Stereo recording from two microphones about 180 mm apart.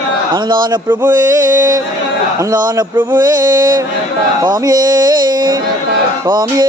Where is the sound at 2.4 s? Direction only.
20° right (ahead or behind).